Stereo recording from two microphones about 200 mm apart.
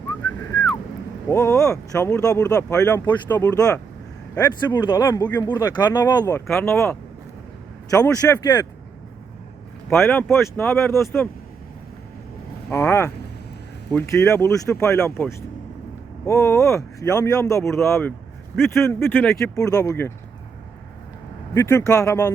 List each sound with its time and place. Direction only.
1.3 s speech: 15° left (ahead or behind)
10.0 s speech: 10° left (ahead or behind)
12.7 s speech: 15° left (ahead or behind)
19.5 s speech: 15° left (ahead or behind)
21.5 s speech: 15° left (ahead or behind)